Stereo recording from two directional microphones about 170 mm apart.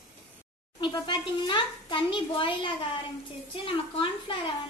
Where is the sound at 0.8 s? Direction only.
25° left (ahead or behind).